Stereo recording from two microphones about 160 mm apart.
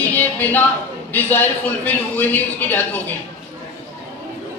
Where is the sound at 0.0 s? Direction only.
10° left (ahead or behind).